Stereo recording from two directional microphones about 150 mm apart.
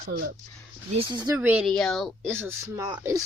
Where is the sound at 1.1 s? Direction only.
25° right (ahead or behind).